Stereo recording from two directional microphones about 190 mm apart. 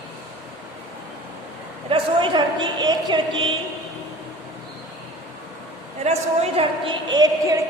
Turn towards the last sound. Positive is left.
turn(degrees=-20)  # may be behind; listen again after turning